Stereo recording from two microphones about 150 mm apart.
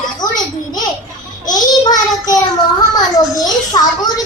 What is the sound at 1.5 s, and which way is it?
Child singing, 25° left (ahead or behind).